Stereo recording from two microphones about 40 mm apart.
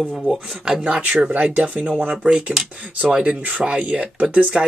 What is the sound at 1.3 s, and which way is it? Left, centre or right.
Speech, right.